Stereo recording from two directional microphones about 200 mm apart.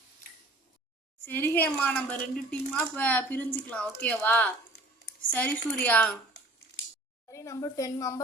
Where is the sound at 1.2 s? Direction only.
10° left (ahead or behind).